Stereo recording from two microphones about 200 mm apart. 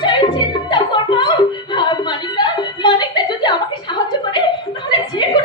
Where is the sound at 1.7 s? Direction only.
20° left (ahead or behind).